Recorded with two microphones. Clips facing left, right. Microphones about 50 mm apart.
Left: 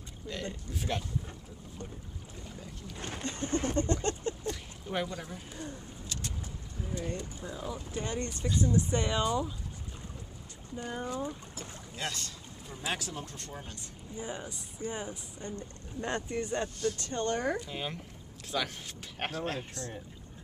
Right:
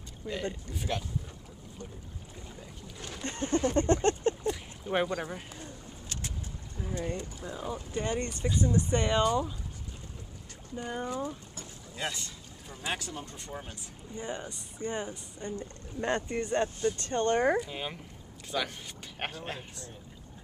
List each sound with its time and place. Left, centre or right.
0.3 s speech: centre
2.5 s speech: centre
3.0 s speech: left
3.3 s speech: right
3.7 s a sound: right
4.4 s a sound: centre
5.1 s speech: right
6.8 s speech: centre
10.8 s speech: centre
14.1 s speech: centre
16.5 s speech: centre
17.1 s speech: right
17.6 s speech: centre